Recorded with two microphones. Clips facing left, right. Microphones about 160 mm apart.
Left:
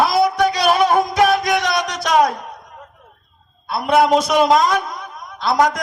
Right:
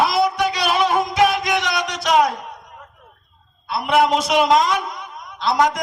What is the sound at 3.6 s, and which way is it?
A man's voice, 45° left (ahead or behind).